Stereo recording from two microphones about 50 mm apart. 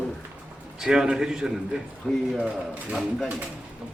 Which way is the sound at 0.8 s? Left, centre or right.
Centre.